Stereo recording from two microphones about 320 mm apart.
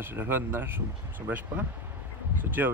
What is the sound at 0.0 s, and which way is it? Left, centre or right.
Speech, centre.